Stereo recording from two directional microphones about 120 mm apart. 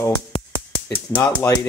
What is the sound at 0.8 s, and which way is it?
Speech, 10° left (ahead or behind).